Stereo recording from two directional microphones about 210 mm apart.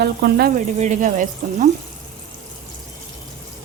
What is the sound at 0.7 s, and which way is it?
Speech, 35° right (ahead or behind).